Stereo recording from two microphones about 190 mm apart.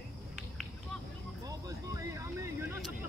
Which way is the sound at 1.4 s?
20° right (ahead or behind).